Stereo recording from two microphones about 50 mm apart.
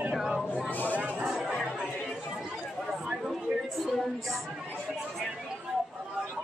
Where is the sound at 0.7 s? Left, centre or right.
Left.